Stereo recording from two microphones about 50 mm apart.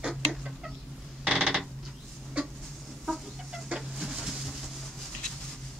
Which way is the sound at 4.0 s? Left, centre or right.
Centre.